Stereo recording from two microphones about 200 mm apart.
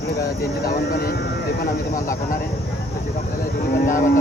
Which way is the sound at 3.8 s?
40° left (ahead or behind).